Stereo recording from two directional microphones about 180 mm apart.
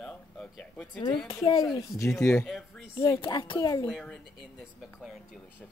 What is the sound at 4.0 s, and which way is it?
Speech, centre (ahead or behind).